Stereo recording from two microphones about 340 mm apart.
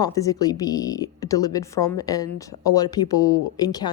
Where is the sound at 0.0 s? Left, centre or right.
Centre.